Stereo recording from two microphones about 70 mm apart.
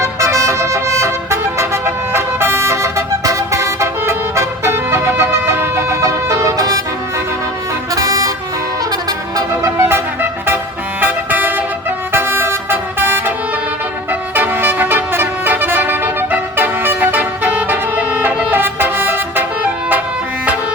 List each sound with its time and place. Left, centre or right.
0.0 s vehicle: right
7.9 s vehicle: right
9.0 s music: right
9.6 s music: right
11.0 s vehicle: right
14.1 s music: right